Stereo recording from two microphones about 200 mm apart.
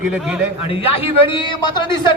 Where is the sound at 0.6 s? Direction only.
30° left (ahead or behind).